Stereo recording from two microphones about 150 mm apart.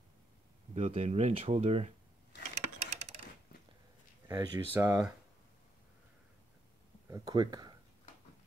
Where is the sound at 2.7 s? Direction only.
45° right (ahead or behind).